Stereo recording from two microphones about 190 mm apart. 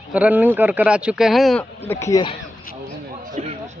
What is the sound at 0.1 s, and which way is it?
Speech, 10° right (ahead or behind).